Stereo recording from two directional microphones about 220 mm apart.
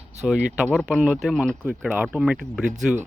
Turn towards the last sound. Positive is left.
turn(degrees=-5)  # may be behind; listen again after turning